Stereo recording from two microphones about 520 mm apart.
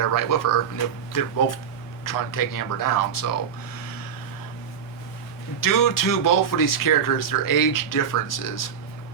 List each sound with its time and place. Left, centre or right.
0.0 s speech: left
5.5 s speech: left